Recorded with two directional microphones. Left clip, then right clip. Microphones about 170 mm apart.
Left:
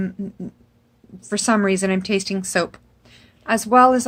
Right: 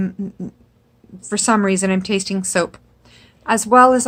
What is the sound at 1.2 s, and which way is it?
A woman's voice, 5° right (ahead or behind).